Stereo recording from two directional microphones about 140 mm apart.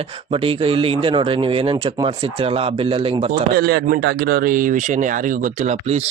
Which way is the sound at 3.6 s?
90° right.